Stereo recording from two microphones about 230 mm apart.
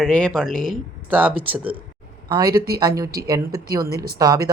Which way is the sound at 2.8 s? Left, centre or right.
Centre.